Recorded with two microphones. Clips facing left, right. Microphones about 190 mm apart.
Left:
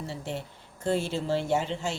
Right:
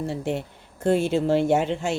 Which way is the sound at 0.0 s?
55° right (ahead or behind).